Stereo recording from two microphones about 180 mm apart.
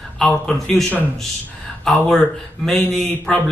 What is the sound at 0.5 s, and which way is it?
A man's voice, 5° left (ahead or behind).